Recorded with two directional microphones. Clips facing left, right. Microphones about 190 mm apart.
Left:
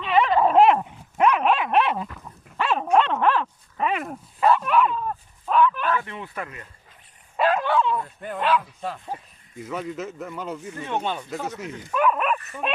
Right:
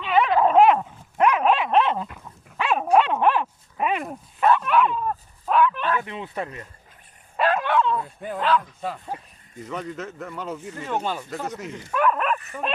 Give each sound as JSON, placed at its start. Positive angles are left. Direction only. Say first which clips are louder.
{"t": 0.0, "sound": "dog", "louder": "even", "side_deg": 0}
{"t": 2.2, "sound": "dog", "louder": "left 1 dB", "side_deg": -10}
{"t": 3.9, "sound": "dog", "louder": "even", "side_deg": 0}
{"t": 5.9, "sound": "speech", "louder": "even", "side_deg": -15}
{"t": 7.3, "sound": "bow-wow", "louder": "even", "side_deg": 5}
{"t": 8.0, "sound": "speech", "louder": "right 1 dB", "side_deg": -5}
{"t": 8.4, "sound": "speech", "louder": "even", "side_deg": 10}